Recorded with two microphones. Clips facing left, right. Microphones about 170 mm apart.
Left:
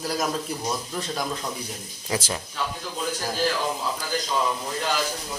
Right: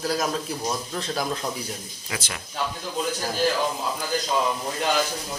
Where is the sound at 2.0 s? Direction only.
30° left (ahead or behind).